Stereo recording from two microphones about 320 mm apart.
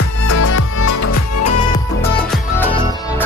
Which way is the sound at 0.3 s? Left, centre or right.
Left.